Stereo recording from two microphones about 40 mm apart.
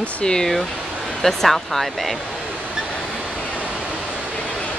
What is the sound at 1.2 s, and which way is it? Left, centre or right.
Speech, centre.